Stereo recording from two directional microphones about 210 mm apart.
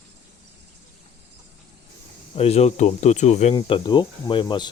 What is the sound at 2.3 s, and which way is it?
Speech, 30° left (ahead or behind).